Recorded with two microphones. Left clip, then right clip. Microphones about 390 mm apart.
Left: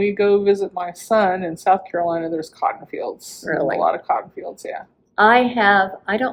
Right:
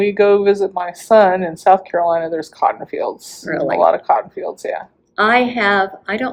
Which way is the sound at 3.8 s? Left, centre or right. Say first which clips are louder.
Right 6 dB; right.